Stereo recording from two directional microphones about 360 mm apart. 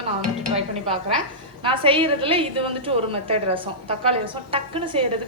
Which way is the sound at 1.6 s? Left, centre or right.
Centre.